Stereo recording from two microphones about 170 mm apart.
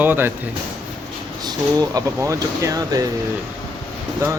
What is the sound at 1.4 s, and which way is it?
Speech, 20° right (ahead or behind).